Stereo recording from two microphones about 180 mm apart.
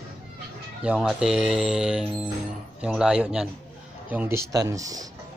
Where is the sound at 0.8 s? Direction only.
5° right (ahead or behind).